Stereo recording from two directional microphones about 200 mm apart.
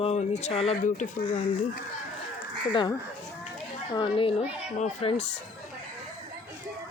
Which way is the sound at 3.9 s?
25° left (ahead or behind).